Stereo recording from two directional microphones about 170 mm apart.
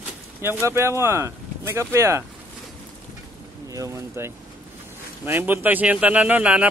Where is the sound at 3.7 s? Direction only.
20° right (ahead or behind).